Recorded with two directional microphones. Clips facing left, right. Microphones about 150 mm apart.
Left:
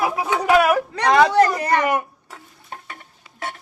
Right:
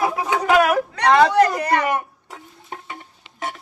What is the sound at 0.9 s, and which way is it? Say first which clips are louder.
Speech: right 2 dB; 30° left (ahead or behind).